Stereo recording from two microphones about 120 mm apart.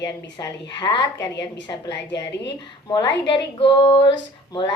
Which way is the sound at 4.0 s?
40° left (ahead or behind).